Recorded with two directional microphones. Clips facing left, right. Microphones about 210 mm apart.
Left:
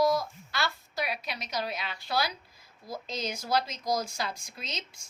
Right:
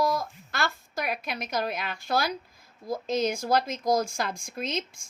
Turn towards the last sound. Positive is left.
turn(degrees=-50)  # may be behind; listen again after turning